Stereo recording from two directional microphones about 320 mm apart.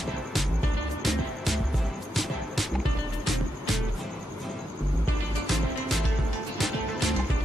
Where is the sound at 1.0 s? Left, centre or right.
Centre.